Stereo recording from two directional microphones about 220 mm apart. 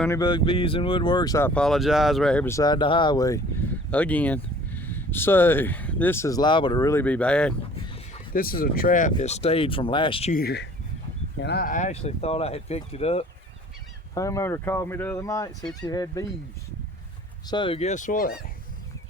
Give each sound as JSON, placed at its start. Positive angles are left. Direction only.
{"t": 0.2, "sound": "speech", "side_deg": 20}
{"t": 8.3, "sound": "speech", "side_deg": 40}
{"t": 10.3, "sound": "speech", "side_deg": 45}
{"t": 14.1, "sound": "speech", "side_deg": 15}
{"t": 17.4, "sound": "speech", "side_deg": 20}